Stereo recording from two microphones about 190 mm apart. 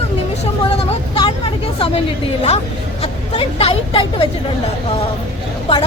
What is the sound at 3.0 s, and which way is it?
Speech, 30° left (ahead or behind).